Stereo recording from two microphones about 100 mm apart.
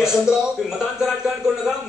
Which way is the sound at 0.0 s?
5° right (ahead or behind).